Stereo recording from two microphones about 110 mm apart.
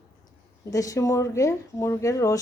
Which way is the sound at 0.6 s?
30° left (ahead or behind).